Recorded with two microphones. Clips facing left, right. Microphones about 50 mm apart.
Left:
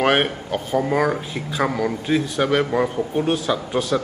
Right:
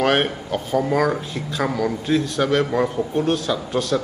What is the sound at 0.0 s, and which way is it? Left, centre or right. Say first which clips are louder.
Speech: even; centre.